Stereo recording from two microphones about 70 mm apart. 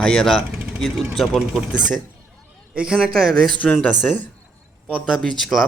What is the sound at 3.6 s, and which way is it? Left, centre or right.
Speech, left.